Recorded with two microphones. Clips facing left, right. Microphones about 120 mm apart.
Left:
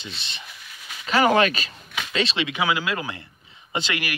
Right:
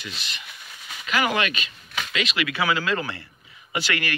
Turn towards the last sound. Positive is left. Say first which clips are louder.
# even
turn(degrees=20)  # may be behind; listen again after turning